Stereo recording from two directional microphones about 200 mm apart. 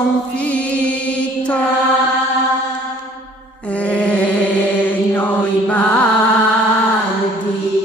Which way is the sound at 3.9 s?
5° left (ahead or behind).